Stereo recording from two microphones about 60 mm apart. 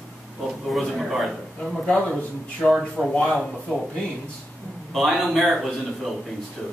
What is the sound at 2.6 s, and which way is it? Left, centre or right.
Speech, centre.